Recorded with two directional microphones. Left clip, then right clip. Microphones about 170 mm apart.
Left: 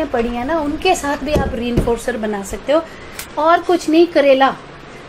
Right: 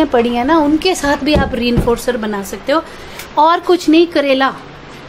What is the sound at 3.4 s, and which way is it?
Speech, 30° right (ahead or behind).